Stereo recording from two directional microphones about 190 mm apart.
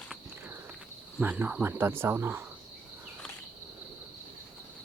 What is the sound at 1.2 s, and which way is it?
Speech, 10° right (ahead or behind).